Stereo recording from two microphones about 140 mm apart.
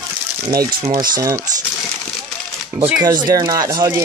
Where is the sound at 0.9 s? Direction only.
25° right (ahead or behind).